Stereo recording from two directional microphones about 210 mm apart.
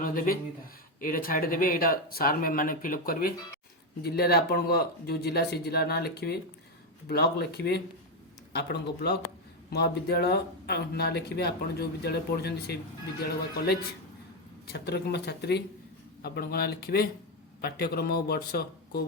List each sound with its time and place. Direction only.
0.0 s speech: 45° left (ahead or behind)
14.7 s speech: 50° left (ahead or behind)